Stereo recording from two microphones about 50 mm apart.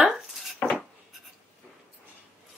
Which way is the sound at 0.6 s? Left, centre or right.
Left.